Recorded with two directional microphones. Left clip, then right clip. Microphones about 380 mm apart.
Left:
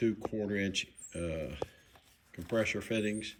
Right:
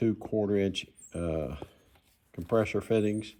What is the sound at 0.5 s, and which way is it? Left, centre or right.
Speech, centre.